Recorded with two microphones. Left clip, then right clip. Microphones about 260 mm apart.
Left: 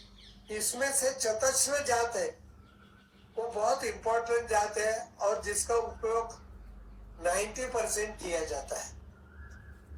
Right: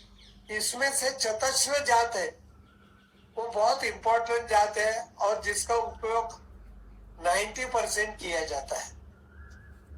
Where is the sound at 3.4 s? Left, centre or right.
Right.